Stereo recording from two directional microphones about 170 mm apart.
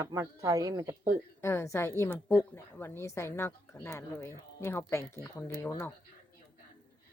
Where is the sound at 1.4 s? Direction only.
15° left (ahead or behind).